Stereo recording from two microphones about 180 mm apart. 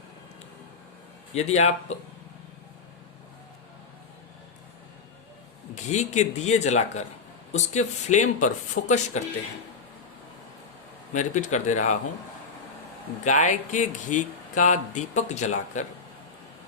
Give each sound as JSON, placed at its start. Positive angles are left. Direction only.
{"t": 1.3, "sound": "speech", "side_deg": 40}
{"t": 5.7, "sound": "speech", "side_deg": 40}
{"t": 11.1, "sound": "speech", "side_deg": 40}
{"t": 13.2, "sound": "speech", "side_deg": 45}